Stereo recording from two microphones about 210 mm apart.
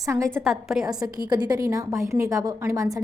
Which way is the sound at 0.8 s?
20° right (ahead or behind).